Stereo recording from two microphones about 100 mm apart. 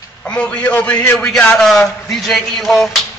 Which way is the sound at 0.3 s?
10° left (ahead or behind).